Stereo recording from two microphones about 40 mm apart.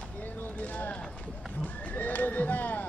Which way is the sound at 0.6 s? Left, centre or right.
Left.